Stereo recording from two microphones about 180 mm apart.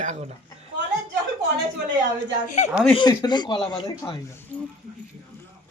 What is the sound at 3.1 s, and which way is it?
A woman's voice, 25° left (ahead or behind).